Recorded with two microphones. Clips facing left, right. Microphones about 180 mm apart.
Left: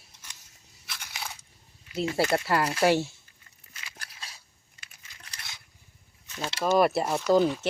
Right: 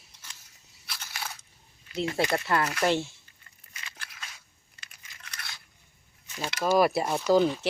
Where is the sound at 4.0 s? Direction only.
30° left (ahead or behind).